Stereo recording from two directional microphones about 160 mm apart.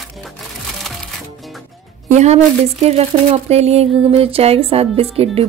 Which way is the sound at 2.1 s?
45° right (ahead or behind).